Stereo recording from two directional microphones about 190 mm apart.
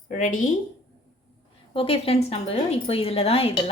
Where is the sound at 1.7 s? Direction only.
30° left (ahead or behind).